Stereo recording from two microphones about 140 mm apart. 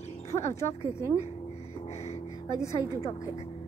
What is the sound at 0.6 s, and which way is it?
Speech, 50° left (ahead or behind).